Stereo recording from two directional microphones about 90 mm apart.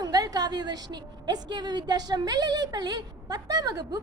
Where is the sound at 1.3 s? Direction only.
55° right (ahead or behind).